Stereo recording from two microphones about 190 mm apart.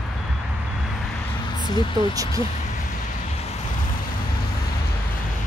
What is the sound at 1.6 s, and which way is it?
Speech, 25° left (ahead or behind).